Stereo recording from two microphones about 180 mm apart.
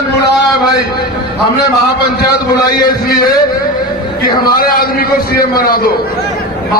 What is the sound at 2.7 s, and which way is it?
Speech, 55° left (ahead or behind).